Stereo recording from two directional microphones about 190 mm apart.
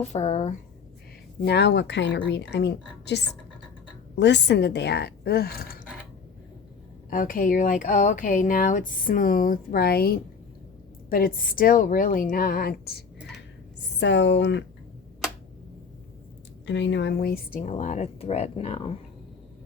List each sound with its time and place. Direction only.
0.0 s speech: 35° left (ahead or behind)
1.5 s a woman's voice: 65° left (ahead or behind)
7.1 s speech: 45° left (ahead or behind)
14.0 s a woman's voice: 65° left (ahead or behind)
16.6 s speech: 70° left (ahead or behind); by 18.9 s 30° left (ahead or behind)